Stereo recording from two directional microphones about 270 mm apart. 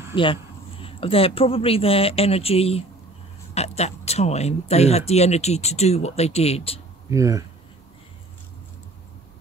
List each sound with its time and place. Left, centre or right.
0.1 s speech: centre
7.1 s speech: centre